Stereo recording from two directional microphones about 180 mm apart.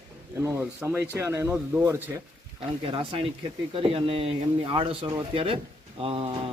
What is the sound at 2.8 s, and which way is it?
A man's voice, 30° right (ahead or behind).